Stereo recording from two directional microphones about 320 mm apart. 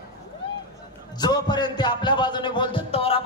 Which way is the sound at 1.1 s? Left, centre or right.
Centre.